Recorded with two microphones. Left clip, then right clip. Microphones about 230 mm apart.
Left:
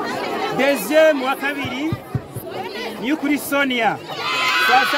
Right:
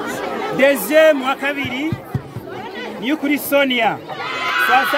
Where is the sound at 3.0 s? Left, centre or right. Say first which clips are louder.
Right 2 dB; centre.